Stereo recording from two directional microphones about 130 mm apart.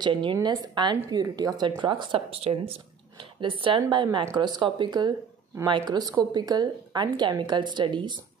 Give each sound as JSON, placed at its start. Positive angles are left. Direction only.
{"t": 0.0, "sound": "a woman's voice", "side_deg": -40}